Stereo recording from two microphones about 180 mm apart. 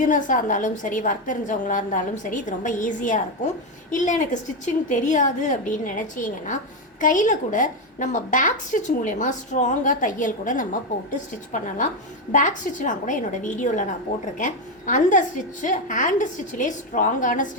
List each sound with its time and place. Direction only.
0.0 s a woman's voice: 45° left (ahead or behind)